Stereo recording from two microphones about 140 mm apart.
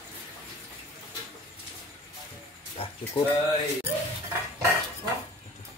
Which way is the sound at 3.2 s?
35° left (ahead or behind).